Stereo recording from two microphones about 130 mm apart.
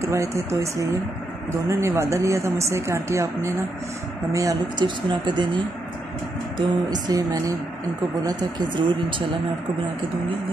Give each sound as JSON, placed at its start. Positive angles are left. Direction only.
{"t": 0.1, "sound": "speech", "side_deg": -25}
{"t": 6.9, "sound": "speech", "side_deg": -30}